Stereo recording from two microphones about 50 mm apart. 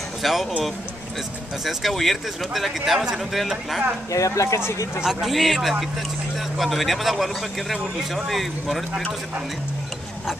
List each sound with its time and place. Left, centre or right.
0.2 s speech: centre
1.6 s speech: centre
4.1 s speech: left
4.6 s speech: left
5.0 s speech: centre